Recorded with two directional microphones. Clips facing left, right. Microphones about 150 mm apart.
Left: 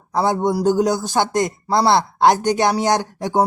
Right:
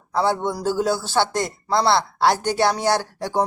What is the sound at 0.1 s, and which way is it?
A man's voice, 15° left (ahead or behind).